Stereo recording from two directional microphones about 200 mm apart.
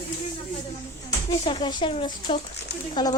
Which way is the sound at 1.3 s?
20° left (ahead or behind).